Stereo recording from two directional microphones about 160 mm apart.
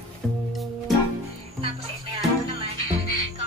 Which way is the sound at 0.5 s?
Centre (ahead or behind).